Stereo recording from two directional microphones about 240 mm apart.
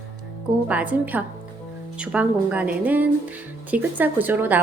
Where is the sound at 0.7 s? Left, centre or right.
Centre.